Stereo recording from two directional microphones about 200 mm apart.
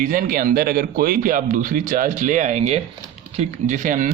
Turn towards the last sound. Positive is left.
turn(degrees=-40)  # may be behind; listen again after turning